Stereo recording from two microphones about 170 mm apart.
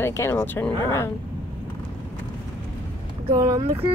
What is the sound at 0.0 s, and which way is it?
Speech, 15° left (ahead or behind).